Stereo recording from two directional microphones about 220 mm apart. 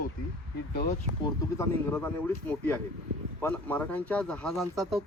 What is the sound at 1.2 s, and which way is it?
Speech, 10° left (ahead or behind).